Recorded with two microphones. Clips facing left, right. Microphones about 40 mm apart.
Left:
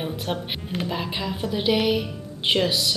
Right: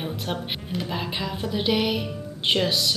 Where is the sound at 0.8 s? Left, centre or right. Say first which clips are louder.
Left 2 dB; centre.